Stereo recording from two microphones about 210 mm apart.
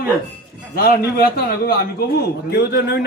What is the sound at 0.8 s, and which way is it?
A man's voice, 45° left (ahead or behind).